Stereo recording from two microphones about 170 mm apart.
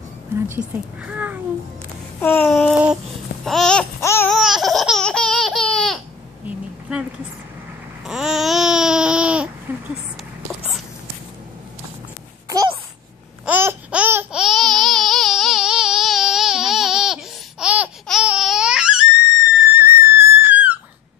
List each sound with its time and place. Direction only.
0.3 s speech: 10° right (ahead or behind)
2.1 s babbling: 10° left (ahead or behind)
2.7 s child singing: 5° right (ahead or behind)
3.4 s babbling: 5° left (ahead or behind)
4.0 s laughter: 15° left (ahead or behind)
4.3 s laughter: centre (ahead or behind)
6.4 s a sound: 5° right (ahead or behind)
8.0 s babbling: centre (ahead or behind)
9.7 s a sound: 15° right (ahead or behind)
12.4 s babbling: 20° right (ahead or behind)
13.5 s babbling: 10° right (ahead or behind)
19.7 s whistle: 15° right (ahead or behind)